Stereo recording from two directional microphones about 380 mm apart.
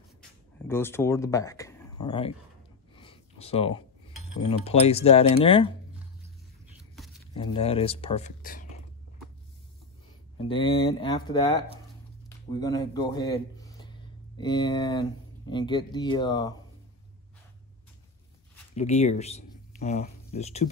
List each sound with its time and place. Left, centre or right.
0.7 s speech: centre
3.0 s a sound: centre
4.5 s speech: centre
7.3 s speech: centre
10.5 s speech: centre
18.8 s speech: centre